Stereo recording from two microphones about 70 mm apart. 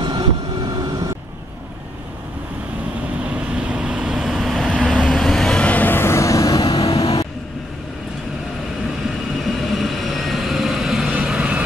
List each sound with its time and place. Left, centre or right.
0.0 s vehicle: right
3.3 s vehicle: centre; by 7.2 s left
9.4 s vehicle: centre